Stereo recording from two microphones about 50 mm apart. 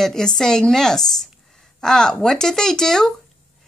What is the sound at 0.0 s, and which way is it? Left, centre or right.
A woman's voice, centre.